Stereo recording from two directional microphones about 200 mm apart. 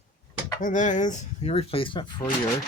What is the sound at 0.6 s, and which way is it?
Speech, 40° left (ahead or behind).